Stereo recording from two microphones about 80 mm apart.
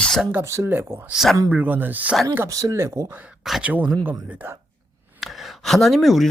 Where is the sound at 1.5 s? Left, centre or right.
Right.